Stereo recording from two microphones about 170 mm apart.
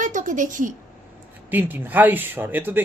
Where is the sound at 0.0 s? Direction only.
50° right (ahead or behind).